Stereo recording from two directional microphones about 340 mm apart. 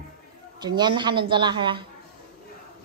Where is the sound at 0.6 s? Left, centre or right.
Centre.